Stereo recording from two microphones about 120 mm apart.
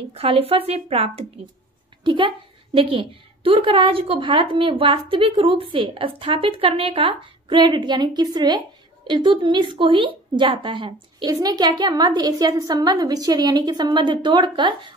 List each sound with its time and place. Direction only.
0.1 s speech: 55° right (ahead or behind)
2.0 s a woman's voice: 45° right (ahead or behind)